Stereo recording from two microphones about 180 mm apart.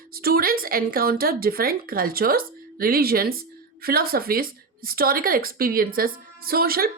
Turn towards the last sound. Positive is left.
turn(degrees=-55)  # may be behind; listen again after turning